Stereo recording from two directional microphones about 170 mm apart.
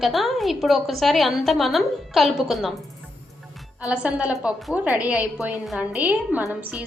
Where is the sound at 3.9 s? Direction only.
5° right (ahead or behind).